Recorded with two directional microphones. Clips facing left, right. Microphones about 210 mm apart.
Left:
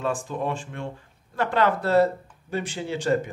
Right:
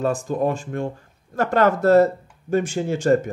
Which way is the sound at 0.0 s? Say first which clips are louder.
Right 6 dB; 40° right (ahead or behind).